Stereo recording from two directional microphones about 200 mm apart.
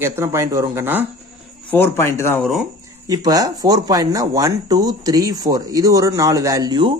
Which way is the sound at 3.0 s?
20° right (ahead or behind).